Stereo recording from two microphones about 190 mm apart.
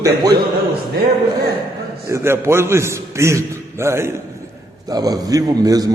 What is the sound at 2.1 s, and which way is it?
A man's voice, 15° right (ahead or behind).